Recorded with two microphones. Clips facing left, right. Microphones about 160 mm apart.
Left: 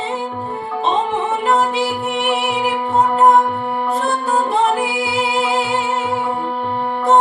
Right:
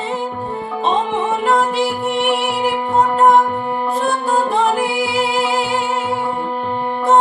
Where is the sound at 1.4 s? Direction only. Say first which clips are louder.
Right 1 dB; centre (ahead or behind).